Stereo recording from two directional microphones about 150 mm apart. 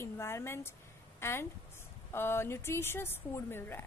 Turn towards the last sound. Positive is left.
turn(degrees=15)  # may be behind; listen again after turning